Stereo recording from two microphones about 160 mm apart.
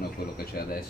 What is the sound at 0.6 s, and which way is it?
Speech, 75° left (ahead or behind).